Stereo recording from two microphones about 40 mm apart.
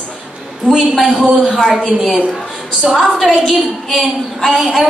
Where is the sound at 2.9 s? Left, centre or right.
Centre.